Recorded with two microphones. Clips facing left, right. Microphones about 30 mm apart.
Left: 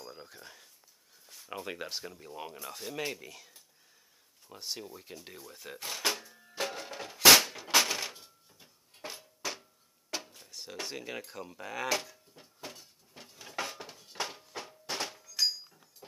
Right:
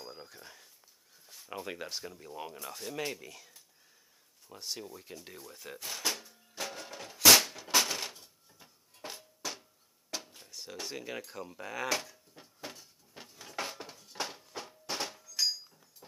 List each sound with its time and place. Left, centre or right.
0.1 s speech: centre
6.0 s music: left; by 9.7 s centre
10.5 s speech: centre
13.3 s dishes: centre
14.1 s a sound: centre
15.7 s a sound: centre